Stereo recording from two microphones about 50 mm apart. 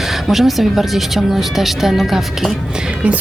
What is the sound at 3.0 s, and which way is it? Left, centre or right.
Speech, right.